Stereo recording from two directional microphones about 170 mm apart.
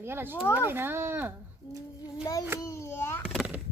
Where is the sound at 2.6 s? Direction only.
15° left (ahead or behind).